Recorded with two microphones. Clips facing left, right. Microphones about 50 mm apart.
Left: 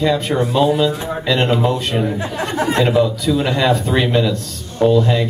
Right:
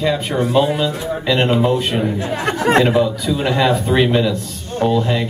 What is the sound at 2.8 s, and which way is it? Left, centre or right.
Speech, centre.